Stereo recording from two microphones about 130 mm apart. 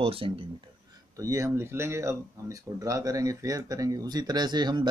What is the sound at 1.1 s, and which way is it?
Speech, 25° right (ahead or behind).